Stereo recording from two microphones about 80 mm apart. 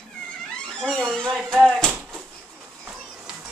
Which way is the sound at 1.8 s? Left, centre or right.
Centre.